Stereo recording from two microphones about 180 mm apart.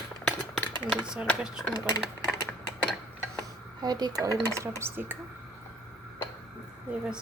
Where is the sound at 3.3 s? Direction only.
20° right (ahead or behind).